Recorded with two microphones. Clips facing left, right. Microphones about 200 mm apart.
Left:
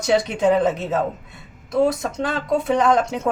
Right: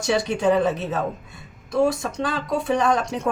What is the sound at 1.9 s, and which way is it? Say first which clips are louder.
Speech: left 2 dB; 20° left (ahead or behind).